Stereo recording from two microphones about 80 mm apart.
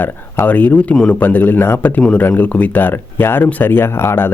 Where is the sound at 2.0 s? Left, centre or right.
Centre.